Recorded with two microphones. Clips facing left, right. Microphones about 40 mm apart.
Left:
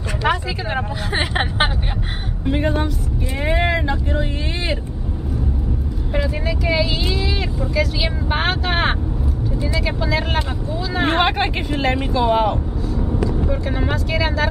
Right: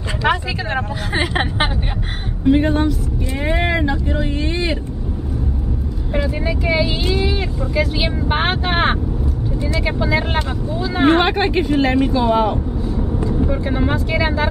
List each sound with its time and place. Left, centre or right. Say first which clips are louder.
0.7 s speech: even; centre
6.4 s speech: right 2 dB; centre
13.4 s speech: right 3 dB; centre
13.8 s speech: right 1 dB; centre